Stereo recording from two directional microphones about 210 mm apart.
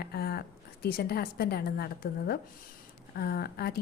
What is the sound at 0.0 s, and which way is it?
A woman's voice, 50° left (ahead or behind).